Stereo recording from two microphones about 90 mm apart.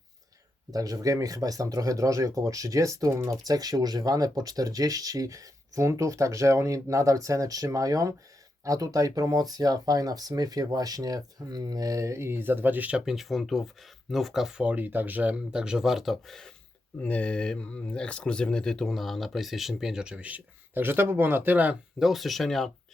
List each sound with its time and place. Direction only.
0.7 s speech: 40° right (ahead or behind); by 13.0 s 20° right (ahead or behind)
13.1 s speech: centre (ahead or behind)
14.6 s speech: 20° right (ahead or behind); by 16.5 s 5° left (ahead or behind)
17.0 s speech: 15° left (ahead or behind); by 21.8 s 20° right (ahead or behind)
21.9 s speech: centre (ahead or behind)